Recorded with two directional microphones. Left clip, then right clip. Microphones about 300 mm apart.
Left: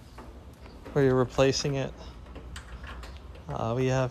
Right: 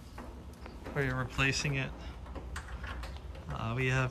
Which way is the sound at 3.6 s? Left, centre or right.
Centre.